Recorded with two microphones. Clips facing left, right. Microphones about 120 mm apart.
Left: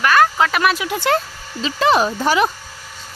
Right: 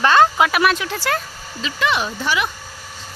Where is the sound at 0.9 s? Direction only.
20° left (ahead or behind).